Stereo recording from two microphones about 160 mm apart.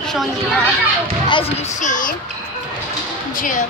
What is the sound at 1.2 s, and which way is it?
Speech, 30° left (ahead or behind).